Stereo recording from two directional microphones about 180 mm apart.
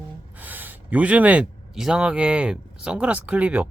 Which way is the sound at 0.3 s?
10° right (ahead or behind).